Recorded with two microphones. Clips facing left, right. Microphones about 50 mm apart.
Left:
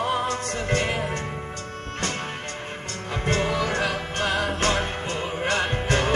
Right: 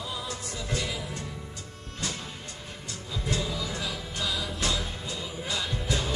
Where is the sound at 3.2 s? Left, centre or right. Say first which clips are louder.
Left 8 dB; left.